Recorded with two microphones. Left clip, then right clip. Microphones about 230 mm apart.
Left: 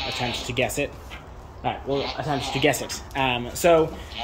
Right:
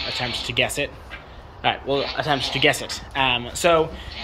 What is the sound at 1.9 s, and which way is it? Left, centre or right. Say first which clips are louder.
Speech: right 4 dB; right.